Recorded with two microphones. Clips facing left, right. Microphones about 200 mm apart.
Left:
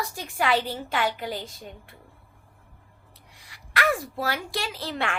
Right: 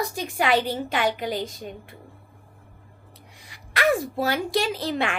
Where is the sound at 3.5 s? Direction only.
20° right (ahead or behind).